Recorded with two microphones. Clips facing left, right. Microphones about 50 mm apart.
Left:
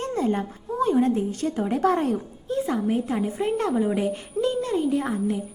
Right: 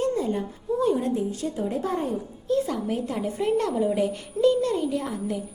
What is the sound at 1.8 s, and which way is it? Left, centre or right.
Speech, left.